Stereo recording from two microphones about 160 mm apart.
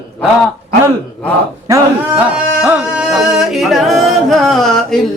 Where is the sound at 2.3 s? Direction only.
5° right (ahead or behind).